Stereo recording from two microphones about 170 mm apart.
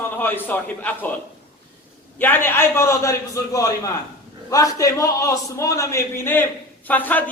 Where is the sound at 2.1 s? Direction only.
10° left (ahead or behind).